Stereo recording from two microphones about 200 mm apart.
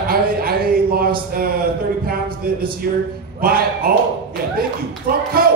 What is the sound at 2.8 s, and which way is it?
Speech, 50° right (ahead or behind).